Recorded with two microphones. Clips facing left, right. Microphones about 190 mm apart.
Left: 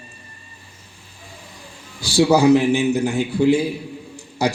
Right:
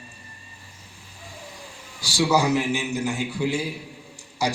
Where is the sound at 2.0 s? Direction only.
60° left (ahead or behind).